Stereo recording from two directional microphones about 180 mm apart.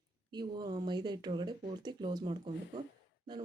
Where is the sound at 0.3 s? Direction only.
25° right (ahead or behind).